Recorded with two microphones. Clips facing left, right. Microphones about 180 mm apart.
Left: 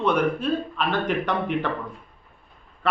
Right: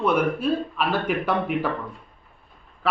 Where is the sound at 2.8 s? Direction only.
Centre (ahead or behind).